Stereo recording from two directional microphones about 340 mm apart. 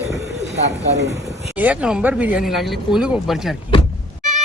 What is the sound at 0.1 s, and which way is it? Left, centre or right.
Bird, centre.